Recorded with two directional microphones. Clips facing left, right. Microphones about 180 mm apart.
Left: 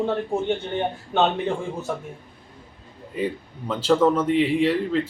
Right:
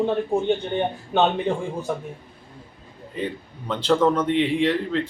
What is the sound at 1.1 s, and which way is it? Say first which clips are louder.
Speech: right 1 dB; 15° right (ahead or behind).